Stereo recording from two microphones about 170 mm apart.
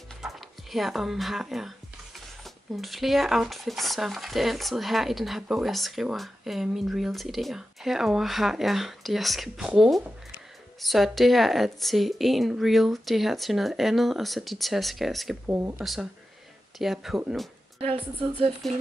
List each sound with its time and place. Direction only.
0.2 s speech: centre (ahead or behind)
15.4 s speech: 10° right (ahead or behind)
15.8 s speech: centre (ahead or behind)
17.7 s a woman's voice: 35° right (ahead or behind)